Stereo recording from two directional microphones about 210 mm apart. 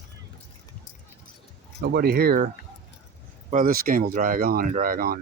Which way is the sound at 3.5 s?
40° right (ahead or behind).